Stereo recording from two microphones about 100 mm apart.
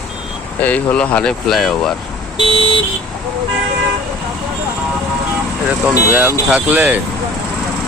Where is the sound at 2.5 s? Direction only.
60° left (ahead or behind).